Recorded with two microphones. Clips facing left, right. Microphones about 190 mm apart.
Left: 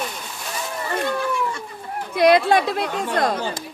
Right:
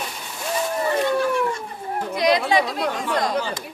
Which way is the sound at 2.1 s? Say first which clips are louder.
Left 4 dB; 55° left (ahead or behind).